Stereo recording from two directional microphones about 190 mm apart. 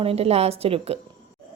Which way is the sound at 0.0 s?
30° right (ahead or behind).